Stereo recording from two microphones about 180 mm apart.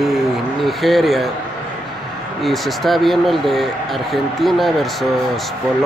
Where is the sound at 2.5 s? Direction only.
Centre (ahead or behind).